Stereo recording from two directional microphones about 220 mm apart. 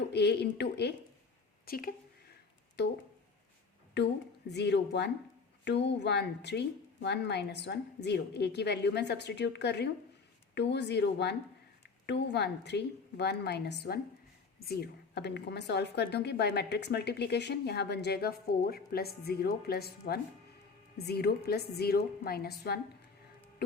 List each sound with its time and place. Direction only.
0.1 s a woman's voice: 50° left (ahead or behind)
4.0 s a woman's voice: 50° left (ahead or behind)